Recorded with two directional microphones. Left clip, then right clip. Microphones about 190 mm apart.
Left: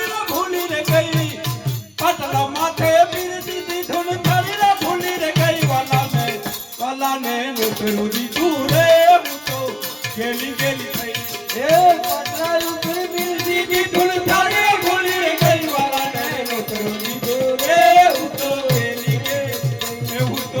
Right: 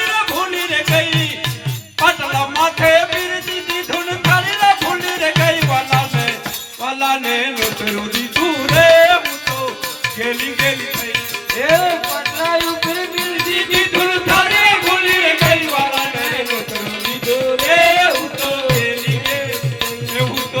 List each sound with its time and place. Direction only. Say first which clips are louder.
0.9 s music: even; 20° left (ahead or behind)
4.4 s music: right 3 dB; 20° left (ahead or behind)
10.6 s music: right 5 dB; 20° left (ahead or behind)
12.4 s music: right 5 dB; 25° left (ahead or behind)
17.7 s music: left 1 dB; 25° left (ahead or behind)